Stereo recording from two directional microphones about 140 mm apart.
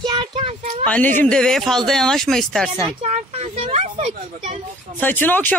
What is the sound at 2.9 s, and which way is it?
Speech, 50° right (ahead or behind).